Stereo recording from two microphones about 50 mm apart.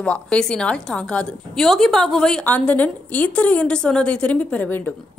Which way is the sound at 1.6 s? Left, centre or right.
Centre.